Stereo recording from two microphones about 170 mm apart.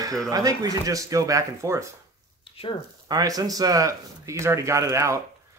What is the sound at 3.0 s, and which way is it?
Speech, 20° right (ahead or behind).